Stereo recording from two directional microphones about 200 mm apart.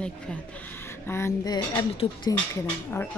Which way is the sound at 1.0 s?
15° left (ahead or behind).